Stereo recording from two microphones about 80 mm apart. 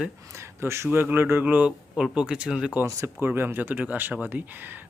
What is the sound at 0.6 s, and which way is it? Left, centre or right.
Speech, right.